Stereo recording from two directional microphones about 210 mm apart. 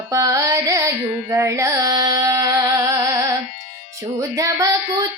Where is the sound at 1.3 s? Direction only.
15° right (ahead or behind).